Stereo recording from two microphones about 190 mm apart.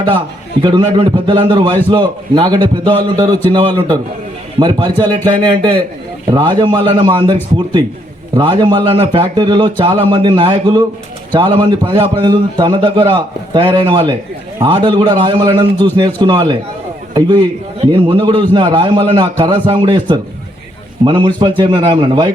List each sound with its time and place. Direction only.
0.6 s a man's voice: 25° right (ahead or behind)
8.4 s a man's voice: 25° right (ahead or behind)